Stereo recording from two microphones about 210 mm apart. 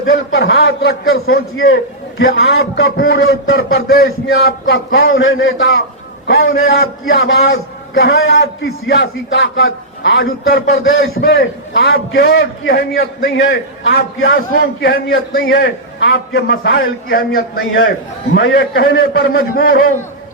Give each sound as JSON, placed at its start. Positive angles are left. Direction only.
{"t": 0.0, "sound": "a man's voice", "side_deg": 65}
{"t": 1.5, "sound": "a man's voice", "side_deg": 70}
{"t": 2.3, "sound": "a man's voice", "side_deg": 55}
{"t": 6.2, "sound": "a man's voice", "side_deg": 50}
{"t": 7.9, "sound": "a man's voice", "side_deg": 60}
{"t": 8.9, "sound": "a man's voice", "side_deg": 55}
{"t": 14.6, "sound": "a man's voice", "side_deg": 45}